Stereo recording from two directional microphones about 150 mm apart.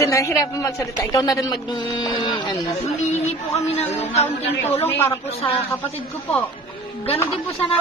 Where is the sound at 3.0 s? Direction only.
50° left (ahead or behind).